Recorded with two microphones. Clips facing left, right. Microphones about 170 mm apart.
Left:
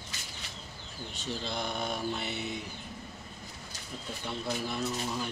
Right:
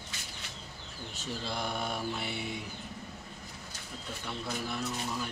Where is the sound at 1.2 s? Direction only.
5° right (ahead or behind).